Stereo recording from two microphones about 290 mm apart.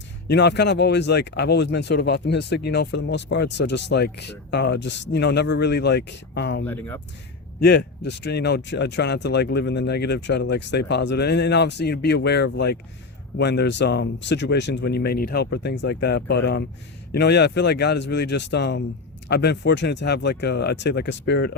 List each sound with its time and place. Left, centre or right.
0.3 s speech: left
6.7 s speech: centre
7.6 s speech: left